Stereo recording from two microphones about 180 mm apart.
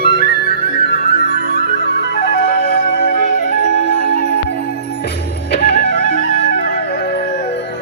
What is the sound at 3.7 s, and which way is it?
Music, 80° left.